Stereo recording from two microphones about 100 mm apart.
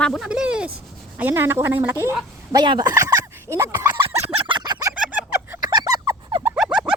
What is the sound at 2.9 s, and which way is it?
Turkey, 30° right (ahead or behind).